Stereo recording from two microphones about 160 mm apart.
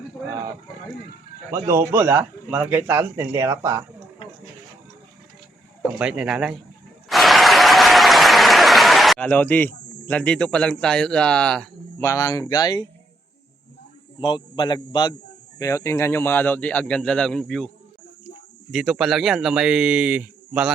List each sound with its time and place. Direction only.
1.5 s a man's voice: 20° right (ahead or behind)
5.8 s speech: 5° right (ahead or behind)
7.1 s applause: centre (ahead or behind)
12.0 s a man's voice: 20° left (ahead or behind)
14.2 s a man's voice: 30° left (ahead or behind); by 17.7 s 5° left (ahead or behind)
18.7 s speech: centre (ahead or behind)